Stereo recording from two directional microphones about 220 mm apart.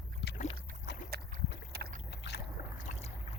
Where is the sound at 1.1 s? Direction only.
45° right (ahead or behind).